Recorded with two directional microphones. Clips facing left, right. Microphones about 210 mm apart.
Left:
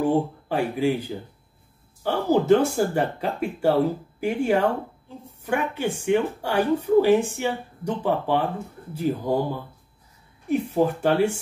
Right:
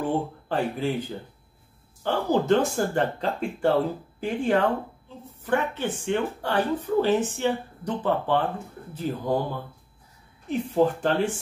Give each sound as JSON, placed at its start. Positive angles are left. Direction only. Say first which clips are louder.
{"t": 0.0, "sound": "speech", "louder": "left 5 dB", "side_deg": 10}
{"t": 10.5, "sound": "speech", "louder": "left 1 dB", "side_deg": 10}